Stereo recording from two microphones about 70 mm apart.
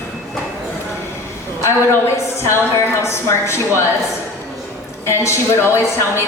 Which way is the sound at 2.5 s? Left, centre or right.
Left.